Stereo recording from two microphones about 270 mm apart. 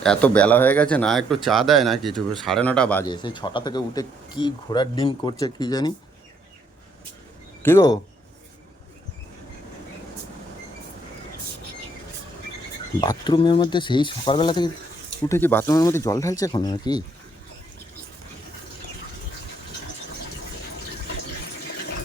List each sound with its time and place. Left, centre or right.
0.0 s speech: centre
7.6 s speech: centre
13.0 s speech: centre